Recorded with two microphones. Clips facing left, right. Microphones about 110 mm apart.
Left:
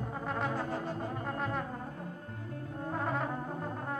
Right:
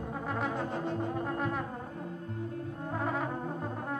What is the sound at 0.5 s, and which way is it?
Brass instrument, 20° right (ahead or behind).